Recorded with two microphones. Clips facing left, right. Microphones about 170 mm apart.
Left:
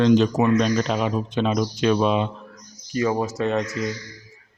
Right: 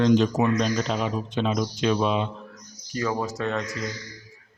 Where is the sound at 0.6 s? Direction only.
65° left (ahead or behind).